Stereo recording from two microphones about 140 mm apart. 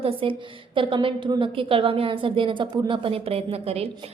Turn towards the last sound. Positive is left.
turn(degrees=-45)  # may be behind; listen again after turning